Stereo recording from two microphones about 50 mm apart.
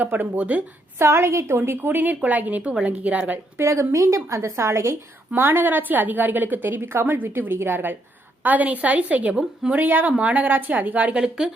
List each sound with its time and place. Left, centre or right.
0.0 s speech: right
0.9 s a woman's voice: right
1.5 s a woman's voice: right
3.6 s a woman's voice: right
5.3 s a woman's voice: right
8.4 s speech: right
9.3 s a woman's voice: centre
9.7 s speech: right
11.1 s a woman's voice: centre